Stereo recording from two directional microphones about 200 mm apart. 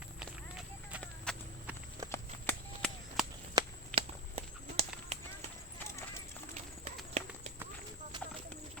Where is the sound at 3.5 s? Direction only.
30° right (ahead or behind).